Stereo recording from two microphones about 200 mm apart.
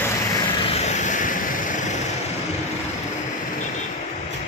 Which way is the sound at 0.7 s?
35° left (ahead or behind).